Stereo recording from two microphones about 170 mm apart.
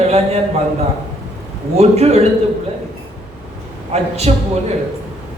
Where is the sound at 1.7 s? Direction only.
40° right (ahead or behind).